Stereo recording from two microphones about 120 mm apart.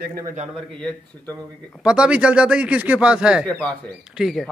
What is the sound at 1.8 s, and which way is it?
A man's voice, 10° right (ahead or behind).